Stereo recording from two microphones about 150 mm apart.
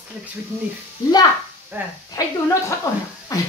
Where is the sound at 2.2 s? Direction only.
25° left (ahead or behind).